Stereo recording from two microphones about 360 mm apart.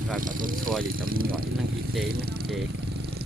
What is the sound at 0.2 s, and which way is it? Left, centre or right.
Speech, right.